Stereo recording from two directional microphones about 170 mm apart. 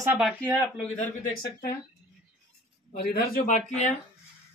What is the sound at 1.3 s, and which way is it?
Speech, 55° left (ahead or behind).